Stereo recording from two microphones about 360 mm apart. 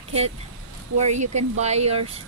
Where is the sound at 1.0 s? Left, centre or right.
Centre.